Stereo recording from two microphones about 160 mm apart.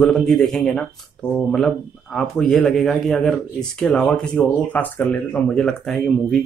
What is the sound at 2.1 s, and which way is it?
Speech, 5° left (ahead or behind).